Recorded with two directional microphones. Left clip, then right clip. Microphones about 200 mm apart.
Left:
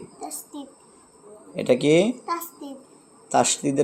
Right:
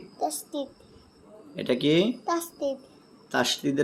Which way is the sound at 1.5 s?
10° left (ahead or behind).